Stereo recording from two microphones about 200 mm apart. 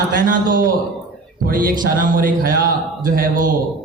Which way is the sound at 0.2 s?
45° right (ahead or behind).